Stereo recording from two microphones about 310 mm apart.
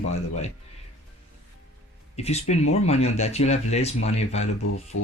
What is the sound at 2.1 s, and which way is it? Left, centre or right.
Speech, left.